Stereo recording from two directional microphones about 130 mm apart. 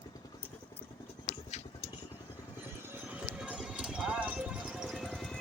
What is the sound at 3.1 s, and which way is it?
Clip-clop, 5° right (ahead or behind).